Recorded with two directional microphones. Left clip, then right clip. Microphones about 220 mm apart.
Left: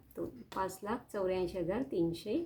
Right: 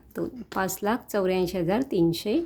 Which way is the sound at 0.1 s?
50° right (ahead or behind).